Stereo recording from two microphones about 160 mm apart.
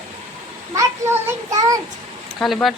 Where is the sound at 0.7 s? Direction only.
20° right (ahead or behind).